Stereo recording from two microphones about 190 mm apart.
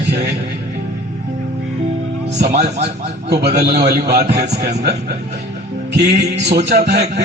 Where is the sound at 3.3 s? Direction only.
60° right (ahead or behind).